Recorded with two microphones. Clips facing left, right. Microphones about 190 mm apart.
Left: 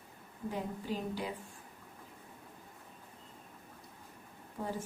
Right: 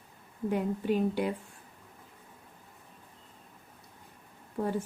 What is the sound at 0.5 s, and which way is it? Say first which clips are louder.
Speech: right 9 dB; 65° right (ahead or behind).